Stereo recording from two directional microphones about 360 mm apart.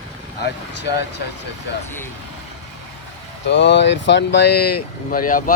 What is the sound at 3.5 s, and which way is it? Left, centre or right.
Speech, left.